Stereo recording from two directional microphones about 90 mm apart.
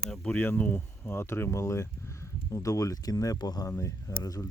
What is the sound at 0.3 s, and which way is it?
Speech, 20° left (ahead or behind).